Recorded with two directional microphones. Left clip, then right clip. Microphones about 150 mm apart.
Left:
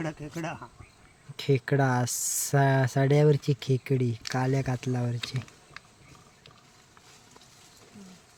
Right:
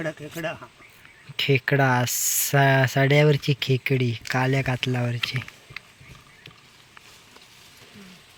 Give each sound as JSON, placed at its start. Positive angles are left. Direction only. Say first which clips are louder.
{"t": 0.0, "sound": "speech", "louder": "right 5 dB", "side_deg": 60}
{"t": 1.4, "sound": "speech", "louder": "right 5 dB", "side_deg": 5}